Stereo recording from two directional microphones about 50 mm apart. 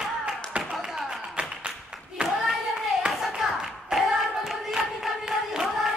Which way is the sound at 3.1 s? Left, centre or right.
Centre.